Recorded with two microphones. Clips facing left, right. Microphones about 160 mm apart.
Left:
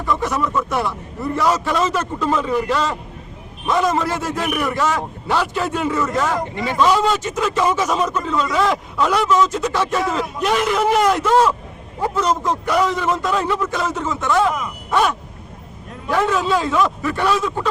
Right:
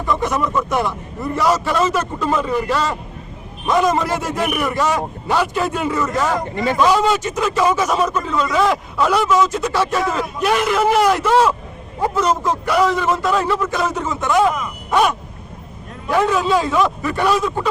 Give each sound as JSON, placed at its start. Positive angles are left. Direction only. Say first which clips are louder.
{"t": 0.2, "sound": "a man's voice", "louder": "right 1 dB", "side_deg": -15}